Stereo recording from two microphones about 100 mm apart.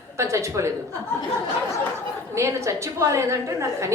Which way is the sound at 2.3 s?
30° right (ahead or behind).